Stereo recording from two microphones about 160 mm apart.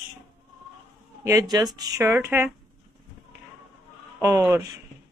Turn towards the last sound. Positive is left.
turn(degrees=-15)  # may be behind; listen again after turning